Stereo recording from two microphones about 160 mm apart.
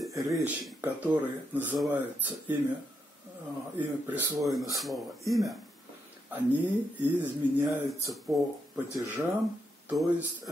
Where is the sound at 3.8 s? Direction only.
10° right (ahead or behind).